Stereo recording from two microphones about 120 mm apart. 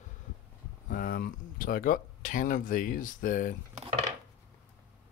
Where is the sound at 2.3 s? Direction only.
90° left.